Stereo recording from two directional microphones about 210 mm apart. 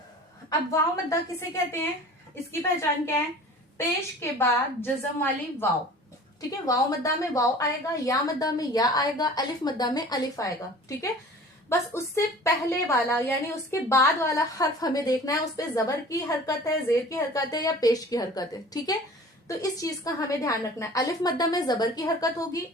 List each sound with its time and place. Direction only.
0.7 s a woman's voice: 15° left (ahead or behind)
3.8 s a woman's voice: 10° left (ahead or behind)
6.7 s a woman's voice: 15° left (ahead or behind)